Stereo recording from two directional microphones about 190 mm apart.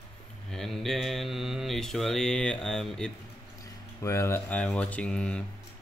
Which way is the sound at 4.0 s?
15° left (ahead or behind).